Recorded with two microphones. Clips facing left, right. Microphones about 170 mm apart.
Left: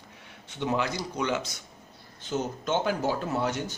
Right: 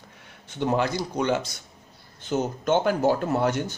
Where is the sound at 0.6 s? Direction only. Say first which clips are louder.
Right 4 dB; 45° right (ahead or behind).